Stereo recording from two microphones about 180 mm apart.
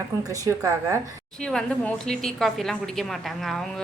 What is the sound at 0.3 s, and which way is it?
Speech, 20° right (ahead or behind).